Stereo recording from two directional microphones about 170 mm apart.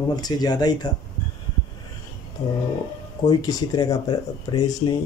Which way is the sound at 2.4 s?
20° left (ahead or behind).